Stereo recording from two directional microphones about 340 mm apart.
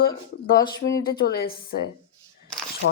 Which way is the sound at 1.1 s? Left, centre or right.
Left.